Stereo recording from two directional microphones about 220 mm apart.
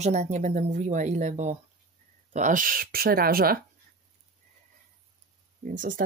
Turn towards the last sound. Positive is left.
turn(degrees=-35)  # may be behind; listen again after turning